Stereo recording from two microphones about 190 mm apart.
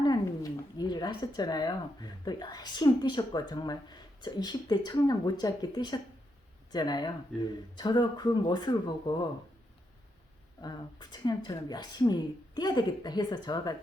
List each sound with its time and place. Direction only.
0.8 s speech: 20° left (ahead or behind)
10.6 s speech: 20° left (ahead or behind)